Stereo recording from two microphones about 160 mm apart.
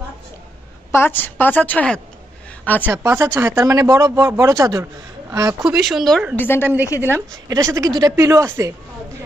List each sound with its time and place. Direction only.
0.9 s a woman's voice: 15° left (ahead or behind)
2.8 s speech: 15° right (ahead or behind)
5.6 s speech: centre (ahead or behind)
7.0 s speech: 15° right (ahead or behind)